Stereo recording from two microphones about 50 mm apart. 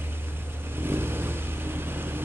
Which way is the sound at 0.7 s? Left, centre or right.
Right.